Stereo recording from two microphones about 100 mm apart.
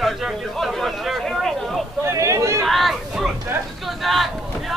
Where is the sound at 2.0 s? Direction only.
30° right (ahead or behind).